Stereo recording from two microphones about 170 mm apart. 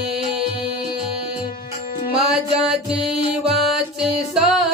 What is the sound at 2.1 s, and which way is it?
Music, 35° right (ahead or behind).